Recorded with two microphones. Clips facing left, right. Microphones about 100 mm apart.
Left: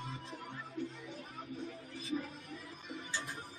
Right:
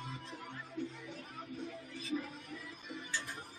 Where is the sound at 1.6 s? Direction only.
35° left (ahead or behind).